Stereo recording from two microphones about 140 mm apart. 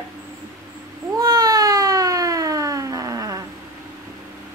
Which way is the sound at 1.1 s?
30° right (ahead or behind).